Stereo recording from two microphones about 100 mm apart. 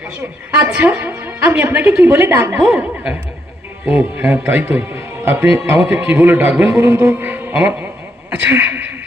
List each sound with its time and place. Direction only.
0.6 s a man's voice: 15° right (ahead or behind)
2.3 s music: 30° right (ahead or behind)
2.6 s a man's voice: 10° right (ahead or behind)
6.5 s a man's voice: centre (ahead or behind)
6.7 s music: 20° right (ahead or behind)
8.4 s a man's voice: 15° right (ahead or behind)